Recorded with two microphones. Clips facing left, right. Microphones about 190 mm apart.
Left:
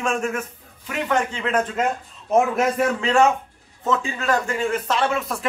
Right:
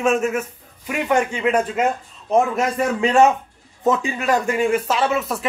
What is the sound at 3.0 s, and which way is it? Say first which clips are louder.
A man's voice: right 5 dB; 20° right (ahead or behind).